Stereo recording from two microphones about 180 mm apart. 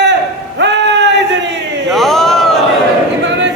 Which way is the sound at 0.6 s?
75° right (ahead or behind).